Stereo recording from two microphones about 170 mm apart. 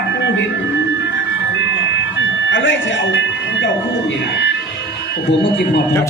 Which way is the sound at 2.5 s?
90° left.